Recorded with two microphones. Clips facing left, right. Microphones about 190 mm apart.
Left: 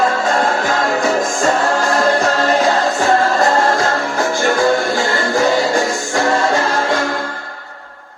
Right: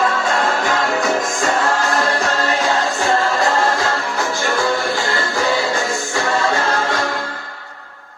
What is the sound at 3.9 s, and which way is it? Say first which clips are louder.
Music: left 3 dB; 50° left (ahead or behind).